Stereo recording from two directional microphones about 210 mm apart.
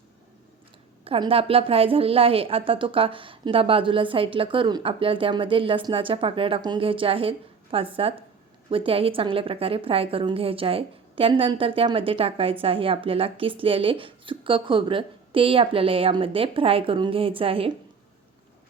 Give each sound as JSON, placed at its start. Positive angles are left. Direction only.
{"t": 1.0, "sound": "a woman's voice", "side_deg": -25}